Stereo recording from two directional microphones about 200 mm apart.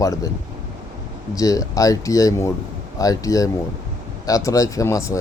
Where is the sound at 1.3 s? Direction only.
15° left (ahead or behind).